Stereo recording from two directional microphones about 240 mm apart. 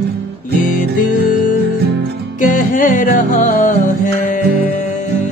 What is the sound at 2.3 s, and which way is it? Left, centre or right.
Music, left.